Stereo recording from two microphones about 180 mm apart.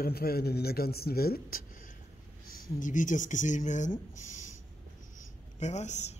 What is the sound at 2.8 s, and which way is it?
Speech, 45° left (ahead or behind).